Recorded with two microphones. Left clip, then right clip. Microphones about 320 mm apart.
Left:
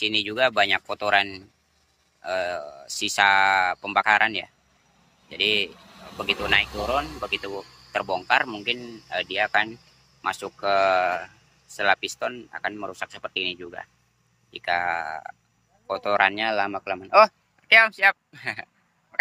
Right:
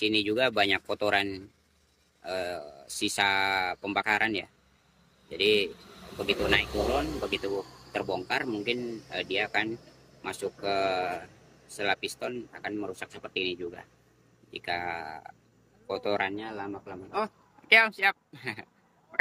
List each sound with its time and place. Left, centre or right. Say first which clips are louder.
0.0 s speech: left 4 dB; centre
16.3 s speech: left 13 dB; left
17.6 s speech: left 5 dB; centre